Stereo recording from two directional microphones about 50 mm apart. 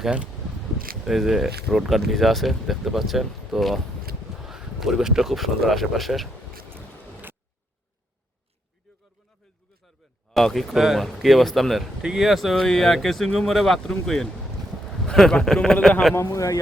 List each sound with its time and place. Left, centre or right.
1.0 s speech: centre
6.7 s boat: right
9.8 s a sound: centre
11.0 s a man's voice: centre
16.1 s speech: left